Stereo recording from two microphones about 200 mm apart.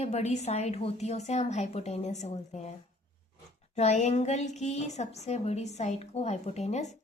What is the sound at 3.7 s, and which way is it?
A woman's voice, 35° left (ahead or behind).